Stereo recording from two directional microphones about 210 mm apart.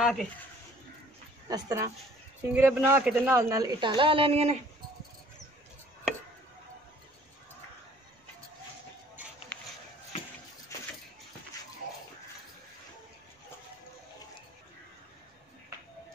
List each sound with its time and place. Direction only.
0.0 s speech: centre (ahead or behind)
1.5 s a woman's voice: 15° right (ahead or behind)
9.5 s a sound: 5° left (ahead or behind)